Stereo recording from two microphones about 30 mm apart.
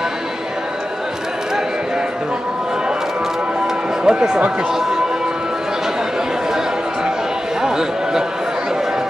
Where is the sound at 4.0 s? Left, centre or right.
Right.